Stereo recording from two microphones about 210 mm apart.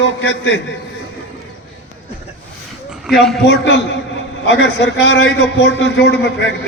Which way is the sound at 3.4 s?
55° left (ahead or behind).